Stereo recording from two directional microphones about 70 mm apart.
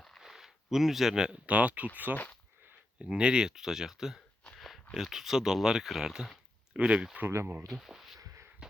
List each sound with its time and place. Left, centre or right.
0.2 s speech: centre; by 1.9 s right
3.0 s speech: centre
4.4 s a sound: centre
4.9 s speech: centre
6.7 s speech: centre
7.3 s speech: right
7.7 s speech: centre
8.2 s a sound: right